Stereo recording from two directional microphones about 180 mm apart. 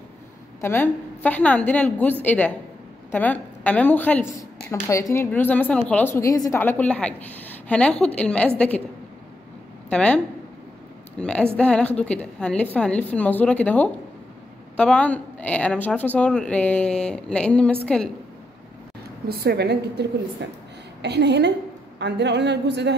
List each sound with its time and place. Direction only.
0.6 s a woman's voice: 10° left (ahead or behind)
9.8 s a woman's voice: 5° left (ahead or behind)
19.2 s a woman's voice: 60° right (ahead or behind)
20.4 s a woman's voice: 80° right